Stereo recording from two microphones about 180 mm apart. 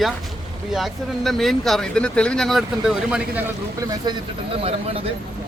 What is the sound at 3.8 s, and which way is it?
Speech, 20° right (ahead or behind).